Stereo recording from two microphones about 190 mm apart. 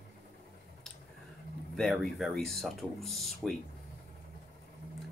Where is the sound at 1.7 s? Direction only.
Centre (ahead or behind).